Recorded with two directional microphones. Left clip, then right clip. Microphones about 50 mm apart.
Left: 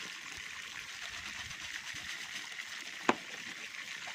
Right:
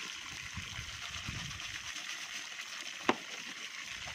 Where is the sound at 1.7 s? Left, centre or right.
Centre.